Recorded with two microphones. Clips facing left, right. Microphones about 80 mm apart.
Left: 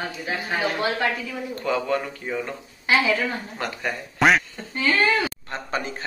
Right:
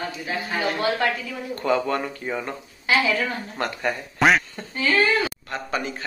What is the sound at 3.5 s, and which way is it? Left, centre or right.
Speech, centre.